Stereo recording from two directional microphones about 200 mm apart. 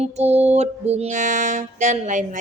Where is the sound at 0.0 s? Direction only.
35° right (ahead or behind).